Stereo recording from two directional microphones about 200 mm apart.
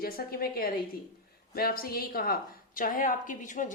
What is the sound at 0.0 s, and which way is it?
A woman's voice, 45° left (ahead or behind).